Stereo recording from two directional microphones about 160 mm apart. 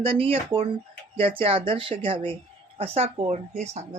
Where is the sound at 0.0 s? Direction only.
35° right (ahead or behind).